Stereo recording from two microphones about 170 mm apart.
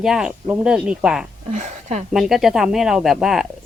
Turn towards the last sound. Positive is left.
turn(degrees=0)  # may be behind; listen again after turning